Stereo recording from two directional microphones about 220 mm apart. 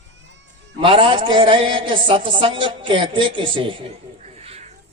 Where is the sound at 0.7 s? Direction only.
25° right (ahead or behind).